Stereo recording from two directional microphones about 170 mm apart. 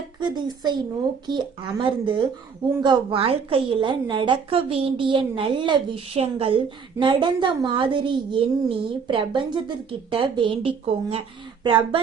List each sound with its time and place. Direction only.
0.2 s a woman's voice: 25° right (ahead or behind)